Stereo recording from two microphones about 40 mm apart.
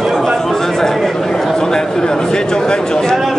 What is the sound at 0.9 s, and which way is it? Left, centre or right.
A man's voice, centre.